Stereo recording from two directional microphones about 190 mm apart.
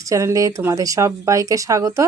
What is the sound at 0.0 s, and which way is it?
Speech, 15° right (ahead or behind).